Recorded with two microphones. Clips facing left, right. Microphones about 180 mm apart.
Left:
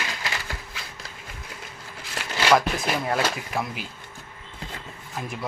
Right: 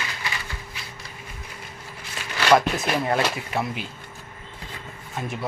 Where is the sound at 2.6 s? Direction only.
Centre (ahead or behind).